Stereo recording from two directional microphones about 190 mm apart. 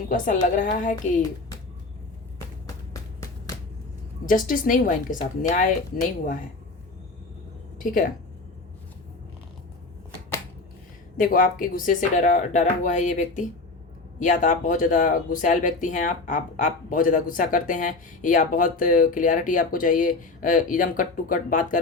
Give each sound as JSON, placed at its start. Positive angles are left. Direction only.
{"t": 0.1, "sound": "speech", "side_deg": 45}
{"t": 2.9, "sound": "a sound", "side_deg": 20}
{"t": 4.3, "sound": "speech", "side_deg": 45}
{"t": 7.8, "sound": "speech", "side_deg": 45}
{"t": 11.2, "sound": "speech", "side_deg": 45}